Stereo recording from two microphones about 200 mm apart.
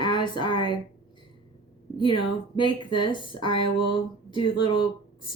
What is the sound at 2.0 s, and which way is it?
Speech, 25° left (ahead or behind).